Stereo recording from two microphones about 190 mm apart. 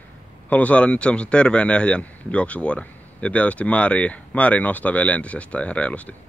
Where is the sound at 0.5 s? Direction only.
5° left (ahead or behind).